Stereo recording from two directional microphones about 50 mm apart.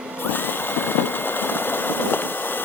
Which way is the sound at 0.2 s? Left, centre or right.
Left.